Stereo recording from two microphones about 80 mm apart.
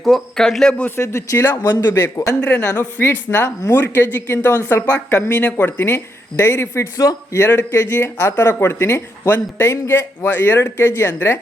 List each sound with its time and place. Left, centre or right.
0.0 s a man's voice: centre
1.0 s speech: left
2.4 s a man's voice: centre; by 7.4 s left
7.4 s speech: left